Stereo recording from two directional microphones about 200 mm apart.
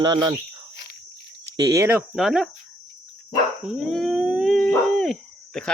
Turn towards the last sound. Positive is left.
turn(degrees=5)  # may be behind; listen again after turning